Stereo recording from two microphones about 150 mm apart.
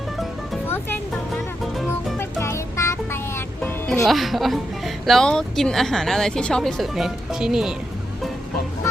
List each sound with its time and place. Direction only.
2.1 s music: 20° left (ahead or behind)
4.0 s a woman's voice: centre (ahead or behind)